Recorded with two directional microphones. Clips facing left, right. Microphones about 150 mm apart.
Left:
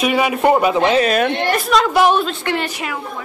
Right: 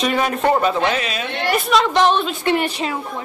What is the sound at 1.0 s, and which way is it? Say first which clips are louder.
Speech: left 10 dB; 55° left (ahead or behind).